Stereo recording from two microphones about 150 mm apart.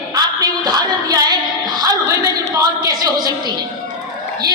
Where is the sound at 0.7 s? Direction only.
25° right (ahead or behind).